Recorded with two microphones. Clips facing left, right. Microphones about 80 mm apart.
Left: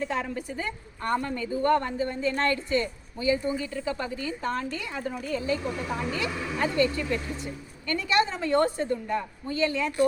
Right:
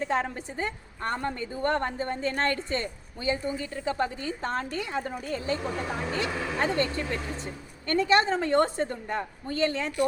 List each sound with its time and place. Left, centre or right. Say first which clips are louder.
0.1 s a woman's voice: right 2 dB; right